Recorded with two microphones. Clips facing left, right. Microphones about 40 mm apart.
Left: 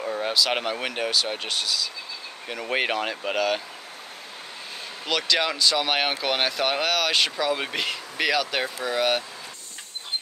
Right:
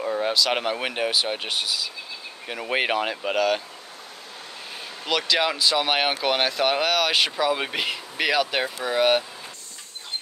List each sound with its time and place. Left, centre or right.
0.0 s speech: centre
5.0 s speech: centre